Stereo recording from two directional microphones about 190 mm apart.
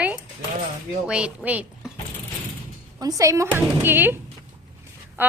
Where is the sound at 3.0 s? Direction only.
20° right (ahead or behind).